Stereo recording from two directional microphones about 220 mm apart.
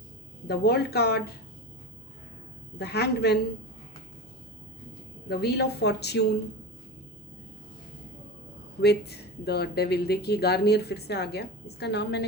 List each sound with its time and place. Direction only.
0.4 s speech: 45° left (ahead or behind)
2.7 s speech: 45° left (ahead or behind)
5.3 s speech: 50° left (ahead or behind)
8.8 s speech: 50° left (ahead or behind)